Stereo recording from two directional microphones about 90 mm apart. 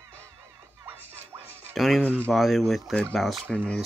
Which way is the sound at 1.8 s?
Centre (ahead or behind).